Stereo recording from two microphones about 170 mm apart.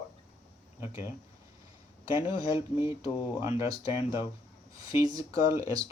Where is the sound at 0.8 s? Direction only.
15° right (ahead or behind).